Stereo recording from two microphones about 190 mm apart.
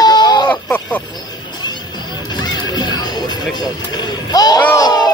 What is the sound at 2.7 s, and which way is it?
Music, 20° left (ahead or behind).